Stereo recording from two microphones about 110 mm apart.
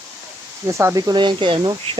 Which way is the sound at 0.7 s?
25° right (ahead or behind).